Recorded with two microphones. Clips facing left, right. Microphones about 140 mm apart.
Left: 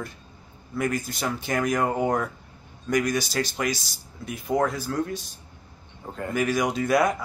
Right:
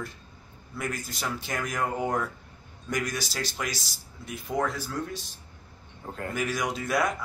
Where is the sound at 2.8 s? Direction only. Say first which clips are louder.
Left 7 dB; centre (ahead or behind).